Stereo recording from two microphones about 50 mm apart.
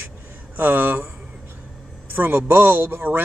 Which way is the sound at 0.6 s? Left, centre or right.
Right.